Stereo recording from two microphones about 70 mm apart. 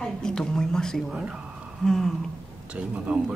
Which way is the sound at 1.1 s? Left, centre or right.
Centre.